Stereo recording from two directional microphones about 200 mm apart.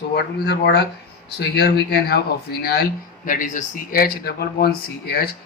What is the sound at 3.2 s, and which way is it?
Speech, 40° left (ahead or behind).